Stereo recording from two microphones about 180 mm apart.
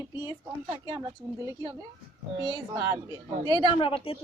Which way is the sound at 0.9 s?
20° right (ahead or behind).